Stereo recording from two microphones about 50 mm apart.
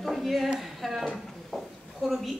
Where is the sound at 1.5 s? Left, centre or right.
Centre.